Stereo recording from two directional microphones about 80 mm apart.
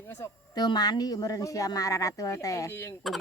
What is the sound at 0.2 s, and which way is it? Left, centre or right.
Speech, left.